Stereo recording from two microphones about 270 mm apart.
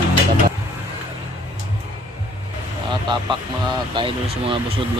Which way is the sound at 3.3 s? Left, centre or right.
Centre.